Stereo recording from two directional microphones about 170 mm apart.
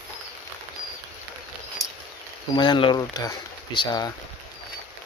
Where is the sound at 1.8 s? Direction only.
20° left (ahead or behind).